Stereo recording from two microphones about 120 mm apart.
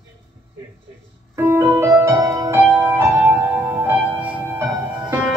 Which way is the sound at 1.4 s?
20° right (ahead or behind).